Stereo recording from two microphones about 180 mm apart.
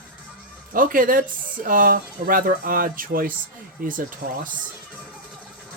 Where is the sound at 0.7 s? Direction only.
50° right (ahead or behind).